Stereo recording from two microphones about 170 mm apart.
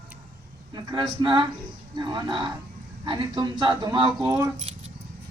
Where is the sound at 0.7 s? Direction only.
25° right (ahead or behind).